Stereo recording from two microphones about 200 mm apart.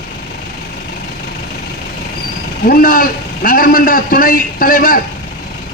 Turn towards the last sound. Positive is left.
turn(degrees=45)  # may be behind; listen again after turning